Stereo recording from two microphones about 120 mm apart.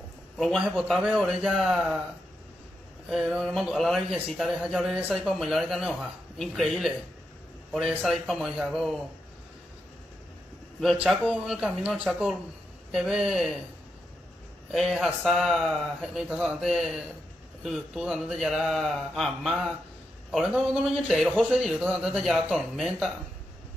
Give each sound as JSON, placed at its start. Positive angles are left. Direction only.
{"t": 0.4, "sound": "a man's voice", "side_deg": 0}
{"t": 3.1, "sound": "a man's voice", "side_deg": 0}
{"t": 8.1, "sound": "a man's voice", "side_deg": 0}
{"t": 10.8, "sound": "a man's voice", "side_deg": 0}
{"t": 14.7, "sound": "a man's voice", "side_deg": 0}